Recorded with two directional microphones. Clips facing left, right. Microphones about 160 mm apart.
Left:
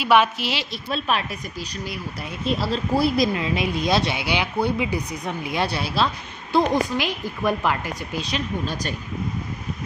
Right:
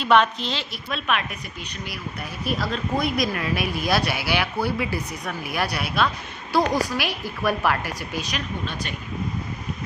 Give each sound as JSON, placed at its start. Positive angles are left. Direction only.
{"t": 0.0, "sound": "a woman's voice", "side_deg": 5}
{"t": 0.7, "sound": "speech", "side_deg": 35}
{"t": 2.4, "sound": "speech", "side_deg": 25}
{"t": 8.2, "sound": "speech", "side_deg": 35}